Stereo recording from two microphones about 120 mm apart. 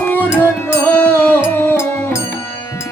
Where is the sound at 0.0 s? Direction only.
15° left (ahead or behind).